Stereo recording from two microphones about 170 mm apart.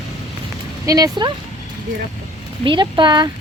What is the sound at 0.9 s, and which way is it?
Speech, 25° right (ahead or behind).